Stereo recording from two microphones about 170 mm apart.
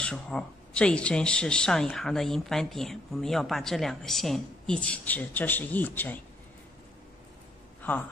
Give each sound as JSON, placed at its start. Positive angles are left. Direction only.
{"t": 0.0, "sound": "speech", "side_deg": 5}
{"t": 7.8, "sound": "speech", "side_deg": 10}